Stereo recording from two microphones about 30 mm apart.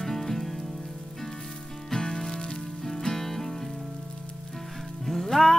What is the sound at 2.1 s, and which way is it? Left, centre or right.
Music, left.